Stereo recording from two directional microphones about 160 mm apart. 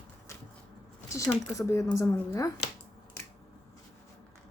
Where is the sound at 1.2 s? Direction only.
20° left (ahead or behind).